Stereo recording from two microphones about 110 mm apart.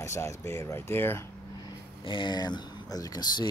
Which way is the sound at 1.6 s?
45° left (ahead or behind).